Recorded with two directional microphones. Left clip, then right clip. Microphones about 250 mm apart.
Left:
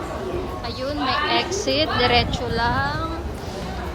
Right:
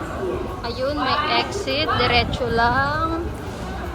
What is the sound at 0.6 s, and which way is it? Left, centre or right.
Speech, centre.